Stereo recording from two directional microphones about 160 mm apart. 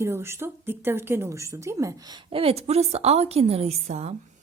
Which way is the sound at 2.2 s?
40° right (ahead or behind).